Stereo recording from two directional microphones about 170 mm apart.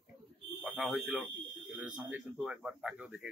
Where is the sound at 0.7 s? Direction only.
Centre (ahead or behind).